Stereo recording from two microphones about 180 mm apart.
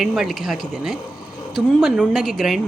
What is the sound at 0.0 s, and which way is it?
A woman's voice, centre (ahead or behind).